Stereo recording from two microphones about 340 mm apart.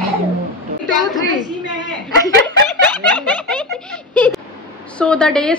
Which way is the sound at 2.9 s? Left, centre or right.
Centre.